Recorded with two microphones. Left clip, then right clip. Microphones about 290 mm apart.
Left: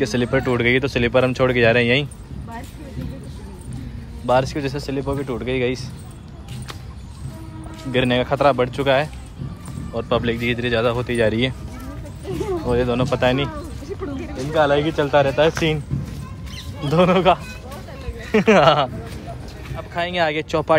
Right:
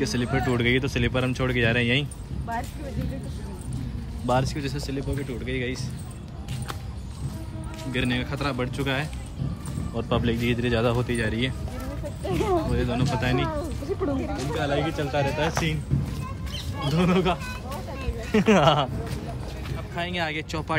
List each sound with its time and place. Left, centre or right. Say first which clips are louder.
0.0 s speech: left 6 dB; centre
4.3 s speech: left 7 dB; centre
7.9 s speech: left 10 dB; centre
11.1 s speech: left 9 dB; centre
12.6 s speech: left 8 dB; centre
13.6 s a sound: right 2 dB; right
14.6 s speech: left 11 dB; centre
16.9 s speech: left 10 dB; centre